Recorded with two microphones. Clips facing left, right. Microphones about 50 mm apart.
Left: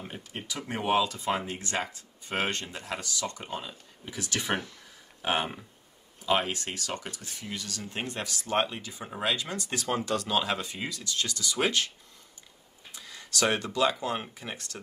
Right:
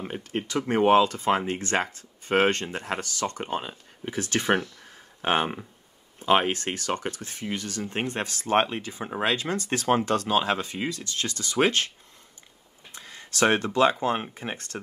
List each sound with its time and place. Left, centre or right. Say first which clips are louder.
0.5 s speech: right 8 dB; right
12.9 s a sound: left 1 dB; right
13.7 s speech: right 5 dB; right